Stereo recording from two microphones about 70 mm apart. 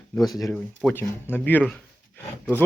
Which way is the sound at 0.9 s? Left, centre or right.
Left.